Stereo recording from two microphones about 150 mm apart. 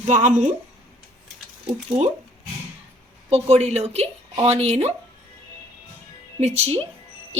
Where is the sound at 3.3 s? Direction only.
45° right (ahead or behind).